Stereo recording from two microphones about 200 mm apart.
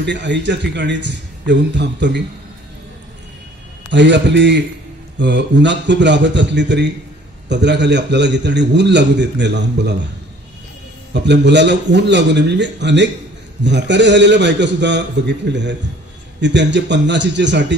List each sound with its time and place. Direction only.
0.0 s a man's voice: 60° right (ahead or behind)
3.9 s a man's voice: 60° right (ahead or behind)
11.1 s a man's voice: 60° right (ahead or behind)